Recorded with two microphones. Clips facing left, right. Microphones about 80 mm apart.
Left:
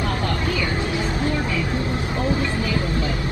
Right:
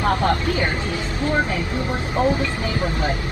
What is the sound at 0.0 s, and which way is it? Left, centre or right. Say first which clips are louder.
Vehicle: right 5 dB; right.